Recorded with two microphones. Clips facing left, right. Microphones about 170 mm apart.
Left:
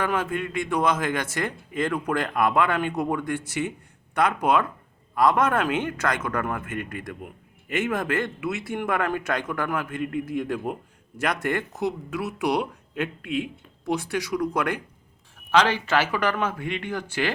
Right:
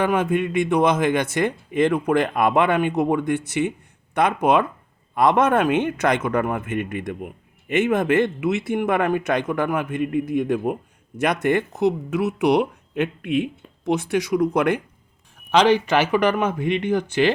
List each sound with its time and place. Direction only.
0.0 s a man's voice: 20° right (ahead or behind)